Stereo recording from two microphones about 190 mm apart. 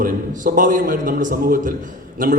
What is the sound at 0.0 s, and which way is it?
A man's voice, 45° right (ahead or behind).